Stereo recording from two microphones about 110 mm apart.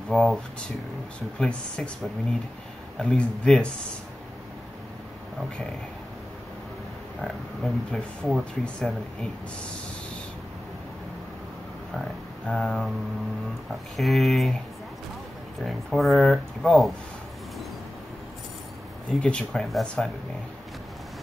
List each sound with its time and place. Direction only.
0.1 s speech: centre (ahead or behind)
1.4 s speech: 5° left (ahead or behind)
3.0 s speech: 10° left (ahead or behind)
7.2 s speech: centre (ahead or behind)
12.0 s speech: centre (ahead or behind)
13.9 s speech: centre (ahead or behind)
15.6 s speech: centre (ahead or behind)
19.2 s speech: 5° left (ahead or behind)